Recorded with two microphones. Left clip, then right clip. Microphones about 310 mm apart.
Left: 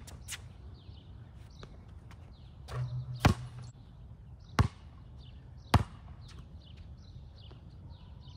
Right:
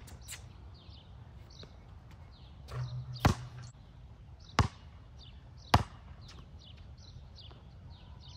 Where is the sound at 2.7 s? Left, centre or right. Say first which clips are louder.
Left 2 dB; centre.